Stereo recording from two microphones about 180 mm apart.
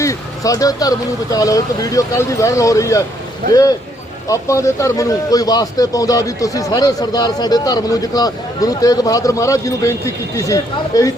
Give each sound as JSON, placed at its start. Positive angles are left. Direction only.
{"t": 0.0, "sound": "a man's voice", "side_deg": 20}
{"t": 4.3, "sound": "a man's voice", "side_deg": 15}